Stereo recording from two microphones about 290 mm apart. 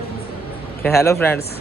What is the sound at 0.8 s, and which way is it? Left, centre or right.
Speech, centre.